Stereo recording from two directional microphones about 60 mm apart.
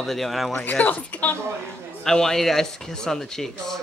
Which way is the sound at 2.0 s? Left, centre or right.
Centre.